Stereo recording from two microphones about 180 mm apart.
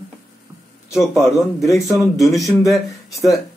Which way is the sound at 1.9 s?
Centre (ahead or behind).